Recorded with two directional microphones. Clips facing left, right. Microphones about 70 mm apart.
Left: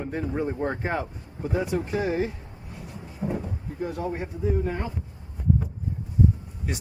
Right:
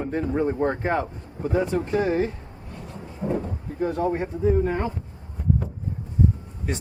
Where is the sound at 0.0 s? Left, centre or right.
Centre.